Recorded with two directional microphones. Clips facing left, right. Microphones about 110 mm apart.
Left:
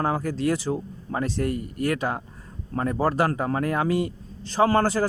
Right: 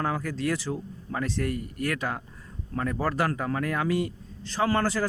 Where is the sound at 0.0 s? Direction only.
30° left (ahead or behind).